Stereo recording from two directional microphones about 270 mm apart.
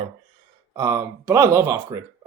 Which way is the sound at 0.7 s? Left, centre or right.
Centre.